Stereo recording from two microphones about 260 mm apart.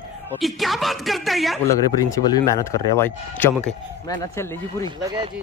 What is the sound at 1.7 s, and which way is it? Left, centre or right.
Speech, centre.